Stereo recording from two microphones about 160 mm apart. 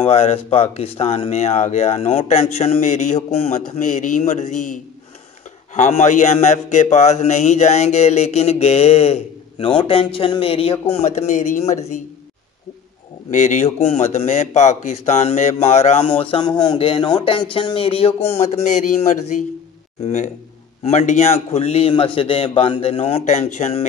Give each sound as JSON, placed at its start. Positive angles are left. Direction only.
{"t": 0.0, "sound": "a man's voice", "side_deg": 40}
{"t": 5.8, "sound": "a man's voice", "side_deg": 50}
{"t": 13.3, "sound": "a man's voice", "side_deg": 50}